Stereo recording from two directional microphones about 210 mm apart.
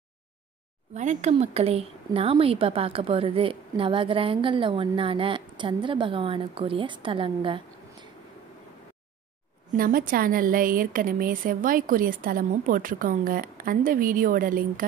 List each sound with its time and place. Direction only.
0.9 s a woman's voice: 35° right (ahead or behind)
9.7 s a woman's voice: 40° right (ahead or behind)